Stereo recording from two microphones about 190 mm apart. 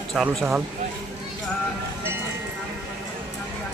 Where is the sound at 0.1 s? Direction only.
Centre (ahead or behind).